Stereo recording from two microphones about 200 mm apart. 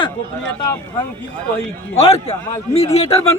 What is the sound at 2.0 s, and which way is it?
A man's voice, 30° left (ahead or behind).